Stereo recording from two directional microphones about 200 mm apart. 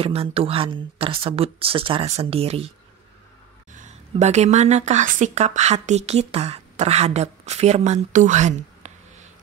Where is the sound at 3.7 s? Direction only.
35° right (ahead or behind).